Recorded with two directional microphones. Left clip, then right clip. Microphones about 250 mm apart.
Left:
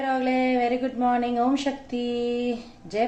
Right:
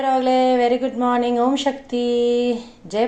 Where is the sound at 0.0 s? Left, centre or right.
Centre.